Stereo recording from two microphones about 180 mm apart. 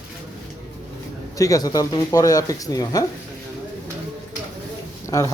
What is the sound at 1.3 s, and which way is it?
Speech, 20° left (ahead or behind).